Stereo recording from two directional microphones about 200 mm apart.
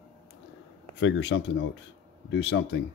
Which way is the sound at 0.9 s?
65° left (ahead or behind).